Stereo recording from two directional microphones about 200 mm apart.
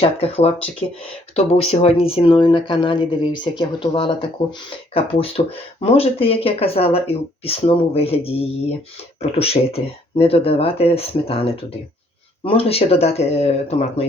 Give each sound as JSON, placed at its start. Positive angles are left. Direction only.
{"t": 0.0, "sound": "speech", "side_deg": 30}